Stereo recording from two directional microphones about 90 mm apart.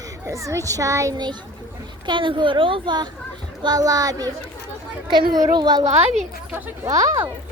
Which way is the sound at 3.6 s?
45° right (ahead or behind).